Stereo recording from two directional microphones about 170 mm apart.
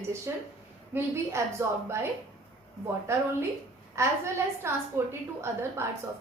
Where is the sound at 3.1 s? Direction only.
15° right (ahead or behind).